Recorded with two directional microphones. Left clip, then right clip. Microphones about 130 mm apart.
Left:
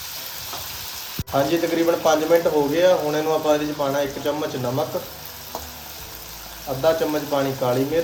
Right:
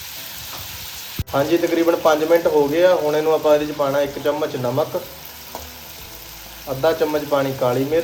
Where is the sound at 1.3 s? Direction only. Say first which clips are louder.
Right 2 dB; 15° left (ahead or behind).